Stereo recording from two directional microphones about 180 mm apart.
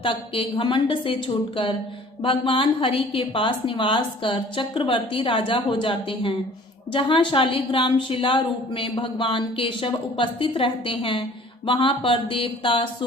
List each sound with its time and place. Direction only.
0.0 s a woman's voice: 30° left (ahead or behind)
2.2 s a woman's voice: 30° left (ahead or behind)